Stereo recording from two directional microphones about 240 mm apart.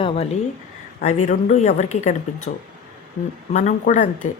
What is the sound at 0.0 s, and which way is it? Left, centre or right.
Speech, left.